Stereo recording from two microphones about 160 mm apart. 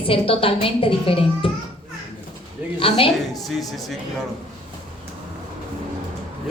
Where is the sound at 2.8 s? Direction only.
35° left (ahead or behind).